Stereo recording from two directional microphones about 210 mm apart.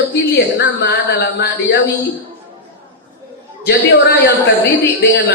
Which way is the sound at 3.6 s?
50° left (ahead or behind).